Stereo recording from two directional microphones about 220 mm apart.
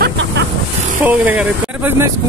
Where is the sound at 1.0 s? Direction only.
5° right (ahead or behind).